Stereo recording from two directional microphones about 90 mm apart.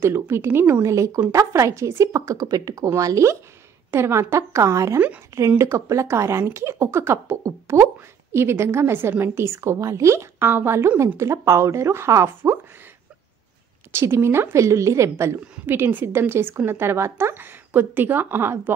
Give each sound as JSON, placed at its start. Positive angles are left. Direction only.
{"t": 0.0, "sound": "a woman's voice", "side_deg": -30}
{"t": 13.9, "sound": "a woman's voice", "side_deg": -30}